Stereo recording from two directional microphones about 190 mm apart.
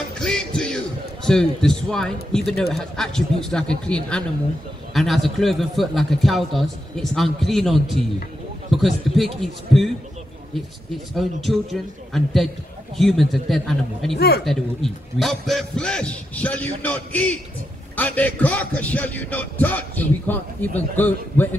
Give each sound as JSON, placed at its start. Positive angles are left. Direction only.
{"t": 0.2, "sound": "music", "side_deg": 5}
{"t": 0.6, "sound": "a man's voice", "side_deg": 5}
{"t": 11.1, "sound": "a man's voice", "side_deg": 0}
{"t": 14.1, "sound": "speech", "side_deg": 55}
{"t": 14.4, "sound": "a man's voice", "side_deg": 0}
{"t": 17.9, "sound": "music", "side_deg": 10}